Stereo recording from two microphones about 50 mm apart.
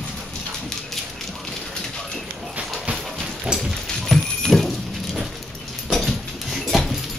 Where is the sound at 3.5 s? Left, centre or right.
Centre.